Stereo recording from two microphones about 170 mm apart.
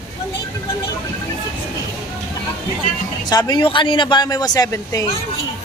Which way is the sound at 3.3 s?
25° left (ahead or behind).